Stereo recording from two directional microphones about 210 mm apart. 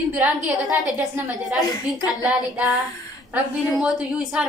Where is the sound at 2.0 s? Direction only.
20° left (ahead or behind).